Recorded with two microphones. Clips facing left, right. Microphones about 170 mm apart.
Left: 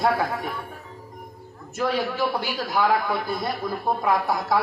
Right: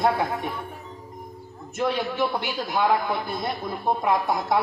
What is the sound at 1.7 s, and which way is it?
A man's voice, 25° right (ahead or behind).